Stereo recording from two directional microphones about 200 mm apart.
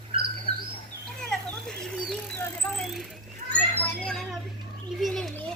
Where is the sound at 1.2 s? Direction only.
5° left (ahead or behind).